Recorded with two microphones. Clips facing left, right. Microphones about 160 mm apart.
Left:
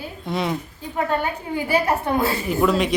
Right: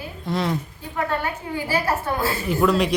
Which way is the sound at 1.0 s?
20° left (ahead or behind).